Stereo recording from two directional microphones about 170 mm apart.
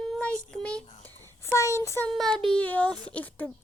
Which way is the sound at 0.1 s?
5° left (ahead or behind).